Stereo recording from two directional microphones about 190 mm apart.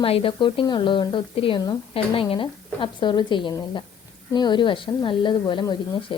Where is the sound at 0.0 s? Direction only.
30° left (ahead or behind).